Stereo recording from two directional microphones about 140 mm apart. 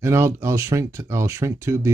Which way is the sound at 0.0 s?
20° right (ahead or behind).